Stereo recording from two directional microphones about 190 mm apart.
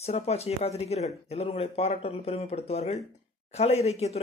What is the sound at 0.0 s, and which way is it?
Speech, 35° left (ahead or behind).